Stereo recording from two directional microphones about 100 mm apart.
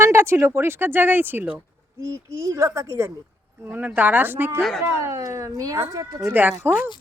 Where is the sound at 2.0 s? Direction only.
30° right (ahead or behind).